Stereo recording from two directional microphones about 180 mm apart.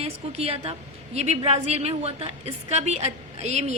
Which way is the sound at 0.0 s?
35° right (ahead or behind).